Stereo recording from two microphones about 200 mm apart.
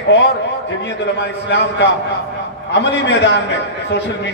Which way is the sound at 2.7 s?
60° left (ahead or behind).